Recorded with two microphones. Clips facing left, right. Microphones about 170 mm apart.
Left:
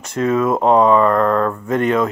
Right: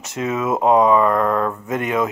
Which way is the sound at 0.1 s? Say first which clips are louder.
Left 5 dB; 5° right (ahead or behind).